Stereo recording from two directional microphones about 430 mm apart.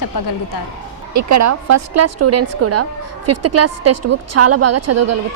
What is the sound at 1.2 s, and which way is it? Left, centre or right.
A woman's voice, right.